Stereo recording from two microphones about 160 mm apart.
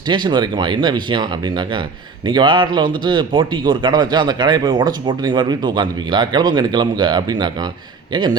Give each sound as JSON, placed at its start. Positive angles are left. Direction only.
{"t": 0.1, "sound": "speech", "side_deg": -30}